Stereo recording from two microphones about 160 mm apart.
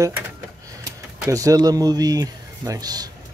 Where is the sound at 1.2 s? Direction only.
20° right (ahead or behind).